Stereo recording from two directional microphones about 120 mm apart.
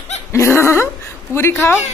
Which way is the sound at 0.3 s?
20° left (ahead or behind).